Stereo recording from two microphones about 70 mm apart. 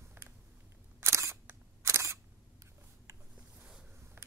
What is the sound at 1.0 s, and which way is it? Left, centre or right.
Single-lens reflex camera, right.